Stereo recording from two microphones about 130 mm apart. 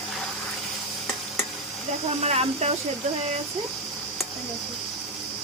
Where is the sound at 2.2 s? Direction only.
55° right (ahead or behind).